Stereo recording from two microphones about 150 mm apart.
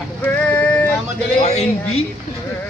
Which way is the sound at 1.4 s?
45° left (ahead or behind).